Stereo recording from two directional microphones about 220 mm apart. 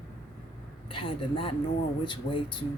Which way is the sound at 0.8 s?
25° left (ahead or behind).